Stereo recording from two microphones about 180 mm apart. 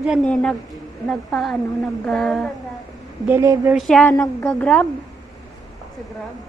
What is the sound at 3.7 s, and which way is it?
Speech, 5° left (ahead or behind).